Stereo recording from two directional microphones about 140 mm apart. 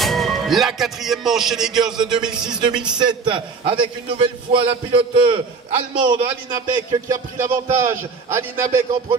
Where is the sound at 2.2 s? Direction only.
5° right (ahead or behind).